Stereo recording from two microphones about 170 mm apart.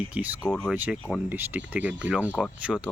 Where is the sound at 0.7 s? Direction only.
10° right (ahead or behind).